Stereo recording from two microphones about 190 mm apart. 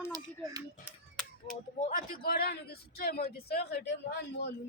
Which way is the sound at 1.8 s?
45° left (ahead or behind).